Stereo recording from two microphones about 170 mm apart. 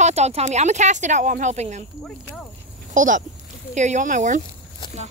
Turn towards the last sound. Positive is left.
turn(degrees=-45)  # may be behind; listen again after turning